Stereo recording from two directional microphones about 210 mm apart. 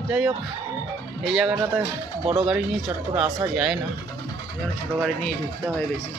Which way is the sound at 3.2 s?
5° right (ahead or behind).